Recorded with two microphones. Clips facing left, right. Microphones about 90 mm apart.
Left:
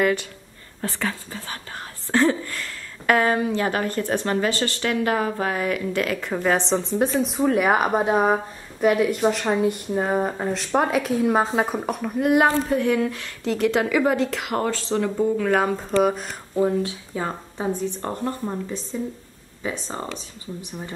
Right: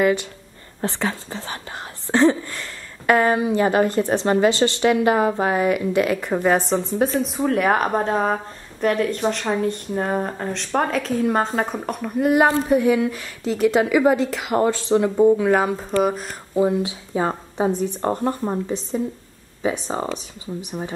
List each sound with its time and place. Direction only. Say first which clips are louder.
0.7 s speech: right 3 dB; 20° right (ahead or behind)
2.5 s speech: even; 5° right (ahead or behind); by 4.7 s 20° right (ahead or behind)
4.8 s speech: right 5 dB; 10° right (ahead or behind)
14.5 s speech: right 5 dB; 15° right (ahead or behind)
17.1 s speech: right 5 dB; 20° right (ahead or behind)